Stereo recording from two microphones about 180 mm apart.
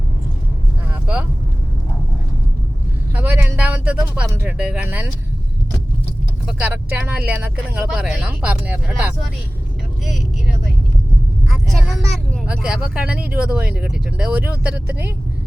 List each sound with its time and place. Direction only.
3.2 s a sound: 10° right (ahead or behind)
4.3 s speech: 10° right (ahead or behind)
6.4 s speech: 5° right (ahead or behind)
11.7 s speech: centre (ahead or behind)